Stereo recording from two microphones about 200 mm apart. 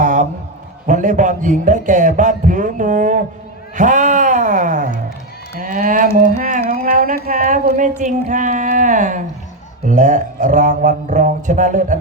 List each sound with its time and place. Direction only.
0.0 s music: 40° right (ahead or behind)
0.9 s a man's voice: 40° right (ahead or behind)